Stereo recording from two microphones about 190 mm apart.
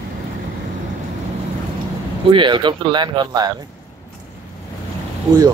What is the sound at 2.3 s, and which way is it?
Speech, 25° right (ahead or behind).